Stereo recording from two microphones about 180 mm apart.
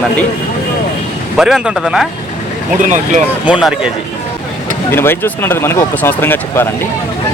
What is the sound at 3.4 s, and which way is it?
Speech, 5° right (ahead or behind).